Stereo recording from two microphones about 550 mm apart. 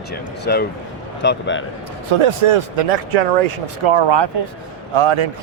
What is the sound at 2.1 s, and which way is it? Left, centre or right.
Speech, right.